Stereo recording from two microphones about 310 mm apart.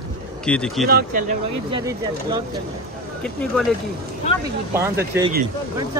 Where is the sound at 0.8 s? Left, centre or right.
Right.